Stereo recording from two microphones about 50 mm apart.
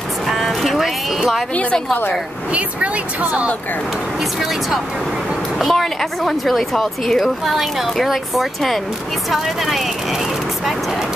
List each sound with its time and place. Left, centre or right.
0.3 s a sound: centre
1.5 s a woman's voice: left
2.5 s speech: right
4.2 s a woman's voice: centre